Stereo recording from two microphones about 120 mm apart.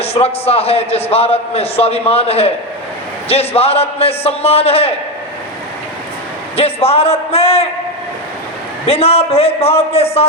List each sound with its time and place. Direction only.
0.0 s a man's voice: 55° left (ahead or behind)
6.6 s a man's voice: 55° left (ahead or behind)
8.9 s a man's voice: 55° left (ahead or behind)